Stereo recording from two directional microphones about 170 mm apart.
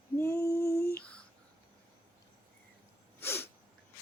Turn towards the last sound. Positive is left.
turn(degrees=15)  # may be behind; listen again after turning